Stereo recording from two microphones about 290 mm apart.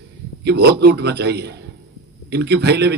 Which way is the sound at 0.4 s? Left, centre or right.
Right.